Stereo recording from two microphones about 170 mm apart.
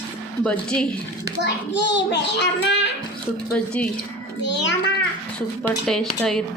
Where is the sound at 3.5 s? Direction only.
5° left (ahead or behind).